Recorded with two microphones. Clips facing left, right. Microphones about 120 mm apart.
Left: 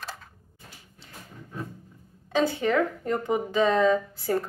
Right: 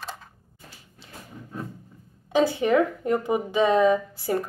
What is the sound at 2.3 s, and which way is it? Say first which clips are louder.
A woman's voice: right 3 dB; 15° right (ahead or behind).